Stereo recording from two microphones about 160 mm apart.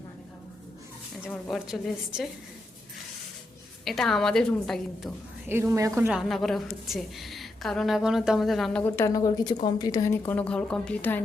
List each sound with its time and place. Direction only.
1.3 s a woman's voice: centre (ahead or behind)
3.8 s a woman's voice: centre (ahead or behind)
5.5 s a woman's voice: 15° right (ahead or behind)
6.1 s a woman's voice: centre (ahead or behind)
8.8 s a woman's voice: 20° left (ahead or behind)